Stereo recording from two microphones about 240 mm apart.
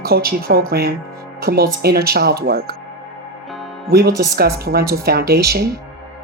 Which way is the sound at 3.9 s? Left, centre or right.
Right.